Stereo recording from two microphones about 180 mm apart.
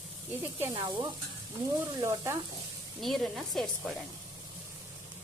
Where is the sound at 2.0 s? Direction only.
15° right (ahead or behind).